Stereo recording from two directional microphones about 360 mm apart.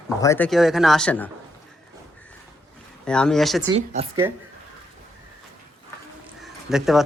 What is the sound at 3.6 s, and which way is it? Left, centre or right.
Speech, centre.